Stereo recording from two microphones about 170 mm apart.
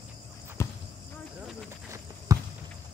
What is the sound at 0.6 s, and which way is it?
Cricket, 15° left (ahead or behind).